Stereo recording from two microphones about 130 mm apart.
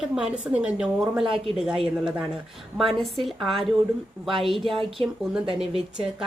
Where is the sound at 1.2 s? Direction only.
45° right (ahead or behind).